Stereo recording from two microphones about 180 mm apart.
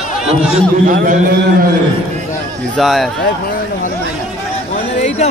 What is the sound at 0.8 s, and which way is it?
Speech, 50° right (ahead or behind).